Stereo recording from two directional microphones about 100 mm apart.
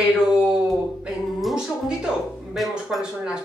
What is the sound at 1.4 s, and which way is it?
Speech, centre (ahead or behind).